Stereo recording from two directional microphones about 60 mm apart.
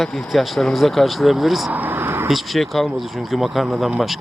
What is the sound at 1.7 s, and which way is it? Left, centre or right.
Vehicle, right.